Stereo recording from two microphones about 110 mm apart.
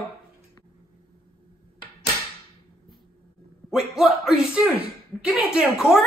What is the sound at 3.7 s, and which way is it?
A man's voice, 5° right (ahead or behind).